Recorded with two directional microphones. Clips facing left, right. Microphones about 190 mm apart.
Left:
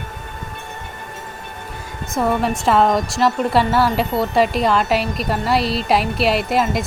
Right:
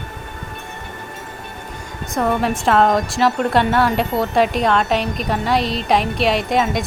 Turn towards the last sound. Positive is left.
turn(degrees=0)  # may be behind; listen again after turning